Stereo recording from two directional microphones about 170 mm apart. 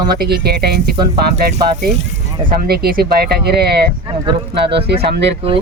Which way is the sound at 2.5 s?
60° right (ahead or behind).